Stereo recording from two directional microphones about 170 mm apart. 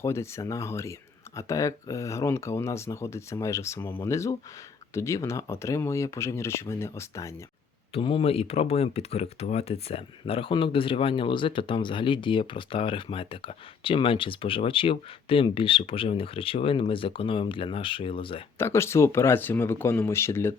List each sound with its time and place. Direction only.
0.0 s speech: 15° left (ahead or behind)
7.9 s speech: 30° left (ahead or behind)
18.6 s speech: 15° left (ahead or behind)